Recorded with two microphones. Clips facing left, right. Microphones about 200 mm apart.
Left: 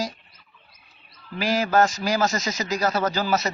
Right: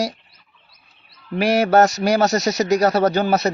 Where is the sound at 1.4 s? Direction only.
70° right (ahead or behind).